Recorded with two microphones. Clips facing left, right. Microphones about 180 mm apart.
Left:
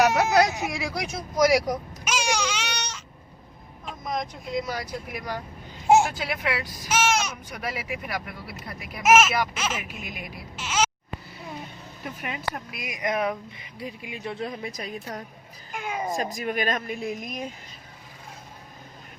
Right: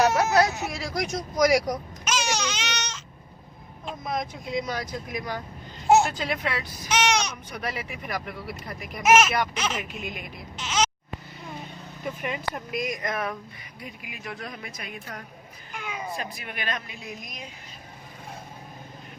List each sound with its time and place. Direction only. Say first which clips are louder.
0.2 s vehicle: left 1 dB; 15° left (ahead or behind)
3.8 s speech: even; 5° right (ahead or behind)
12.7 s speech: left 1 dB; 10° left (ahead or behind)
13.8 s a woman's voice: left 5 dB; 30° left (ahead or behind)
15.7 s speech: left 5 dB; 45° left (ahead or behind)